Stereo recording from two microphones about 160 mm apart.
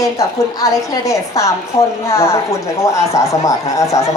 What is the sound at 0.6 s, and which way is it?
A man's voice, 20° left (ahead or behind).